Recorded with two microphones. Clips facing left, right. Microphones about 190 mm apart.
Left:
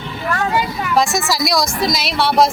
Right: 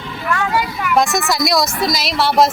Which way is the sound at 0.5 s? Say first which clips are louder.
Even; 25° left (ahead or behind).